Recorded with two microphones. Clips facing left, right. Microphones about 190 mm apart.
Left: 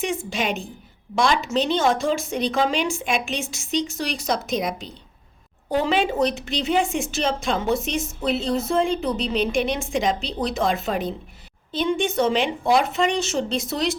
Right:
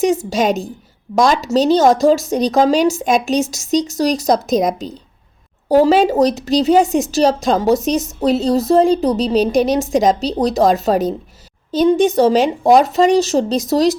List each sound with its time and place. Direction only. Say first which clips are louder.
0.0 s a woman's voice: right 10 dB; 40° right (ahead or behind)